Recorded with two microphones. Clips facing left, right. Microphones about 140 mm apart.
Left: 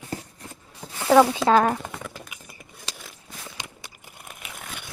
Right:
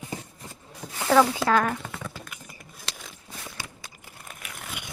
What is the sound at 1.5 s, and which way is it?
Speech, 25° left (ahead or behind).